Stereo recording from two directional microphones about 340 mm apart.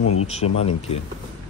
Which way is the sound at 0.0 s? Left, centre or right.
Left.